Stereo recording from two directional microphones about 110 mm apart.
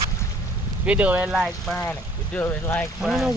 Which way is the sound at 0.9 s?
15° right (ahead or behind).